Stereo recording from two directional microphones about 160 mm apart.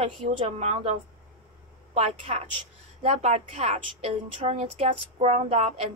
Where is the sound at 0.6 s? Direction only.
40° right (ahead or behind).